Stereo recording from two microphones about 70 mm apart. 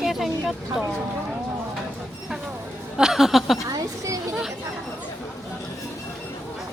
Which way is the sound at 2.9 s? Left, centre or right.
Centre.